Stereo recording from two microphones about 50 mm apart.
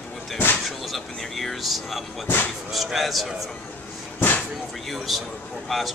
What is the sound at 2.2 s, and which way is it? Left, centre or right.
Speech, left.